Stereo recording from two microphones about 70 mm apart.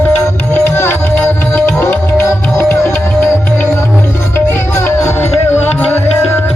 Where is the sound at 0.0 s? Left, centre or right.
Left.